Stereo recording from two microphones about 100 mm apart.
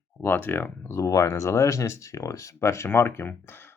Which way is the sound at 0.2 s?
20° left (ahead or behind).